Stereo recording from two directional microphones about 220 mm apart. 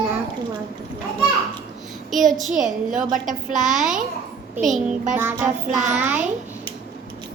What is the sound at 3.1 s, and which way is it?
Speech, 35° right (ahead or behind).